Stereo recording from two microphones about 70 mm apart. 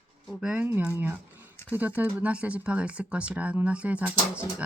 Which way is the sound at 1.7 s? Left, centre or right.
Right.